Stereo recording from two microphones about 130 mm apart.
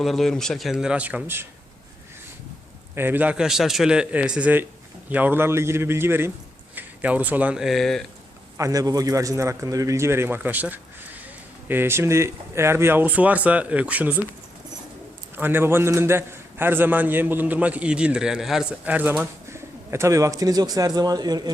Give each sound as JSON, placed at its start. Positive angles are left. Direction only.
{"t": 0.0, "sound": "speech", "side_deg": 0}
{"t": 2.9, "sound": "a man's voice", "side_deg": -15}
{"t": 8.5, "sound": "a man's voice", "side_deg": -25}
{"t": 15.4, "sound": "a man's voice", "side_deg": -15}